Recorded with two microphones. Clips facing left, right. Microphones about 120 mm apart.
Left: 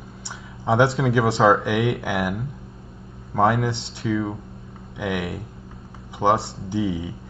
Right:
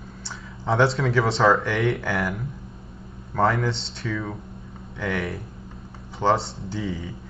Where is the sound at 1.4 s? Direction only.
15° left (ahead or behind).